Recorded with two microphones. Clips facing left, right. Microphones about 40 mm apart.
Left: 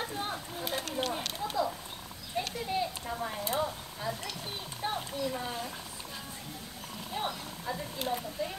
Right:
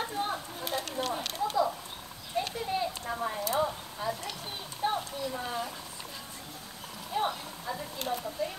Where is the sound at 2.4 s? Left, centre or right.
Centre.